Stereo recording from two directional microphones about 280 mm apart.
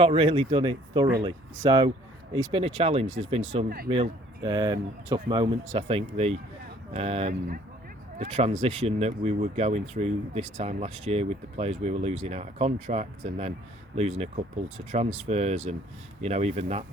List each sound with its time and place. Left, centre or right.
0.0 s speech: centre